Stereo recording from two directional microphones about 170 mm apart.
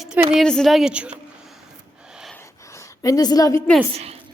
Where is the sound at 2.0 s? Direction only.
5° right (ahead or behind).